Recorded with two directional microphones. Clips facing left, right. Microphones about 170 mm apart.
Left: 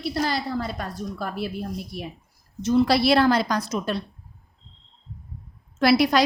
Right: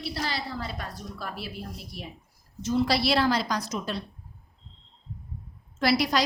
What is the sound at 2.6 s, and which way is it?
A woman's voice, 65° left (ahead or behind).